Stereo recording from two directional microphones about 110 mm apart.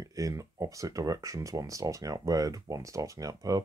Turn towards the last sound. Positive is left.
turn(degrees=-35)  # may be behind; listen again after turning